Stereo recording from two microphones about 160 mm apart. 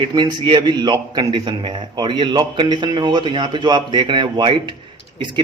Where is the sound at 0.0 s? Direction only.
25° right (ahead or behind).